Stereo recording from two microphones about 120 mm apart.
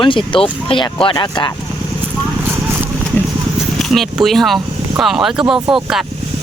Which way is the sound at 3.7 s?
Centre (ahead or behind).